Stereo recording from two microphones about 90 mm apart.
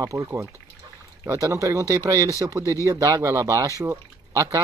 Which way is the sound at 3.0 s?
35° right (ahead or behind).